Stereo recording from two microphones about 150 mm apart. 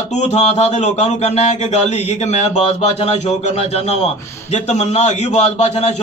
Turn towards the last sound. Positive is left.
turn(degrees=45)  # may be behind; listen again after turning